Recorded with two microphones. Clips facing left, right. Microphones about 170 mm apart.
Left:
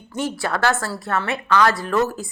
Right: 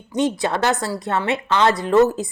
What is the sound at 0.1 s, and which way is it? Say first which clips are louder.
A woman's voice: right 4 dB; 20° right (ahead or behind).